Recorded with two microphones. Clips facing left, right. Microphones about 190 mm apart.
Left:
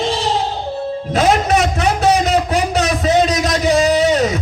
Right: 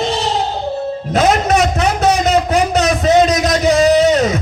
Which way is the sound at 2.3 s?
40° right (ahead or behind).